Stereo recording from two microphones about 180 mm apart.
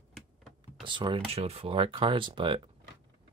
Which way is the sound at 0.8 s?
25° right (ahead or behind).